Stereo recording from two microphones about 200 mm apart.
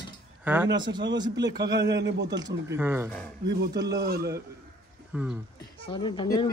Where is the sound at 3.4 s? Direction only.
55° right (ahead or behind).